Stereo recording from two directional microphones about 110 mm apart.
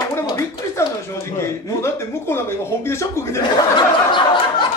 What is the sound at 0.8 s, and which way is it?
Speech, 25° left (ahead or behind).